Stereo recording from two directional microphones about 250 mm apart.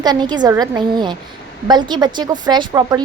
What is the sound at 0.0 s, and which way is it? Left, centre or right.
A woman's voice, centre.